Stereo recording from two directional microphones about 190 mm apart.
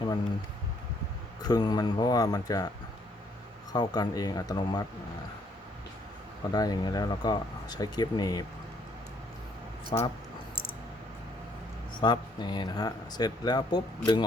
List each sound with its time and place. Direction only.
1.5 s speech: 20° left (ahead or behind)
3.7 s speech: 20° left (ahead or behind)
6.5 s speech: 20° left (ahead or behind)
9.9 s speech: 25° left (ahead or behind)
12.0 s speech: 25° left (ahead or behind)